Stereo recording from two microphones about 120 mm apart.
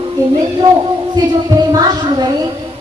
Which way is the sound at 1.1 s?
35° right (ahead or behind).